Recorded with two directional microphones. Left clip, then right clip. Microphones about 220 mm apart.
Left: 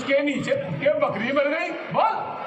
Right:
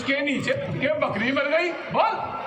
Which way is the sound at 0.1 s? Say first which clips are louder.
Left 2 dB; 50° right (ahead or behind).